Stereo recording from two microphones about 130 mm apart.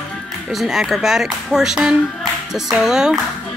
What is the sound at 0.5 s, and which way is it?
Speech, centre (ahead or behind).